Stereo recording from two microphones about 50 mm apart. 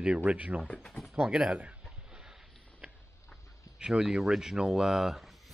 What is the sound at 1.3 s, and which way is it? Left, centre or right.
Speech, right.